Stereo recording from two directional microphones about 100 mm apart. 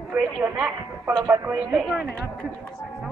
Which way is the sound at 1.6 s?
10° right (ahead or behind).